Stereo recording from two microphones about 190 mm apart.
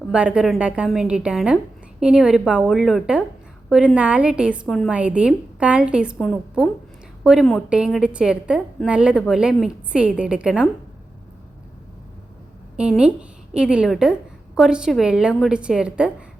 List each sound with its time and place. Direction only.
0.1 s a woman's voice: 5° right (ahead or behind)
12.7 s a woman's voice: 5° right (ahead or behind)